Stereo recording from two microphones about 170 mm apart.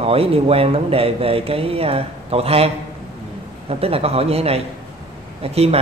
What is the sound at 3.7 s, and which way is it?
Speech, 35° right (ahead or behind).